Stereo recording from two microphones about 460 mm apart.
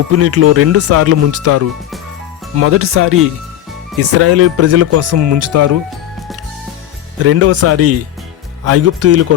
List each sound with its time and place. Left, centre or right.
0.1 s speech: right
7.3 s speech: right